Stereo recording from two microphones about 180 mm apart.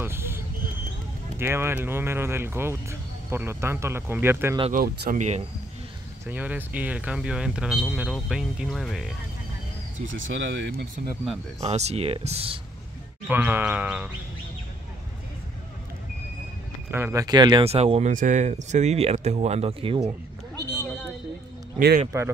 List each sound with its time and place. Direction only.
0.0 s vehicle: 15° right (ahead or behind)
1.4 s speech: 15° right (ahead or behind)
4.7 s speech: 60° right (ahead or behind)
5.1 s speech: 40° right (ahead or behind)
6.2 s speech: 10° right (ahead or behind)
9.9 s speech: 90° right
11.6 s speech: 35° right (ahead or behind)
13.3 s speech: 10° right (ahead or behind)
16.9 s speech: 15° right (ahead or behind); by 20.1 s 30° right (ahead or behind)
21.7 s speech: 55° right (ahead or behind)